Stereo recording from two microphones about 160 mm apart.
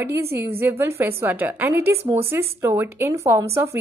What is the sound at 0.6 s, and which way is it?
A woman's voice, 15° right (ahead or behind).